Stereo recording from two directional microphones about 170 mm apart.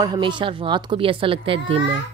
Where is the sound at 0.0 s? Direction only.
30° right (ahead or behind).